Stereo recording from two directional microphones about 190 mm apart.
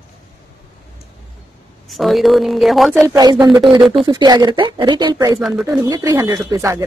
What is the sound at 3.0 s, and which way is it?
Speech, 20° right (ahead or behind).